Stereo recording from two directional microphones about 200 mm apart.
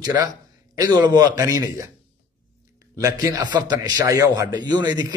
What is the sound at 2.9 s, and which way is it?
A man's voice, 15° right (ahead or behind).